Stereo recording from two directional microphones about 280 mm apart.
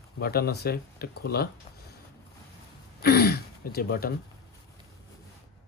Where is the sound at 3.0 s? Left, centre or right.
Left.